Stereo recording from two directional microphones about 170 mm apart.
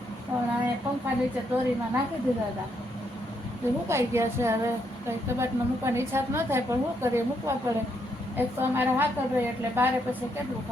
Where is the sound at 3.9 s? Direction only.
15° right (ahead or behind).